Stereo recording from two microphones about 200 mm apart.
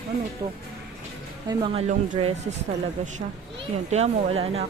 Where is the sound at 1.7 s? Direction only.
30° right (ahead or behind).